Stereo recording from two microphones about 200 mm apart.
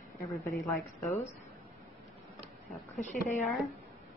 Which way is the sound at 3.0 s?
35° left (ahead or behind).